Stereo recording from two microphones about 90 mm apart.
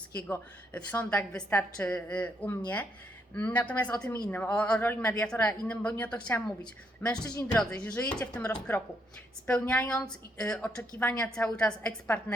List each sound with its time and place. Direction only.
0.3 s a woman's voice: 20° left (ahead or behind)